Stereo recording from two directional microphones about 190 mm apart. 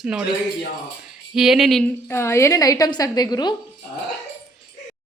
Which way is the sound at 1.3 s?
Centre (ahead or behind).